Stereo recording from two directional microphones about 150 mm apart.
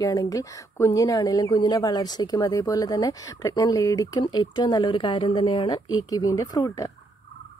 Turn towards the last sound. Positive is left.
turn(degrees=20)  # may be behind; listen again after turning